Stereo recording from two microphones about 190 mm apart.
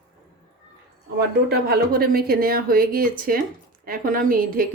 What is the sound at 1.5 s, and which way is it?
A woman's voice, 55° right (ahead or behind).